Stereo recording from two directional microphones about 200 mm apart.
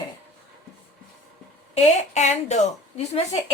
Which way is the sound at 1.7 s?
35° left (ahead or behind).